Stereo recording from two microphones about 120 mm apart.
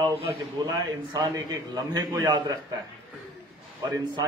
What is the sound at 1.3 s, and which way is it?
A man's voice, 30° right (ahead or behind).